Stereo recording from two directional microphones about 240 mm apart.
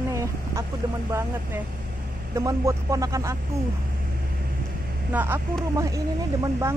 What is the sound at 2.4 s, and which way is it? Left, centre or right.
Speech, centre.